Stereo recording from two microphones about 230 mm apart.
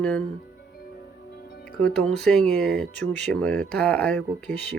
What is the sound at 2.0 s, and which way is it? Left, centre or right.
Speech, centre.